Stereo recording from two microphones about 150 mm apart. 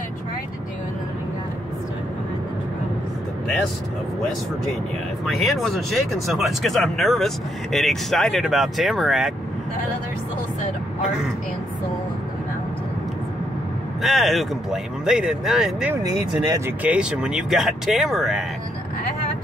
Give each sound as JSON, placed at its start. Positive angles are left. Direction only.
{"t": 5.2, "sound": "speech", "side_deg": 0}
{"t": 14.0, "sound": "speech", "side_deg": 0}
{"t": 15.9, "sound": "speech", "side_deg": -25}
{"t": 16.8, "sound": "speech", "side_deg": -5}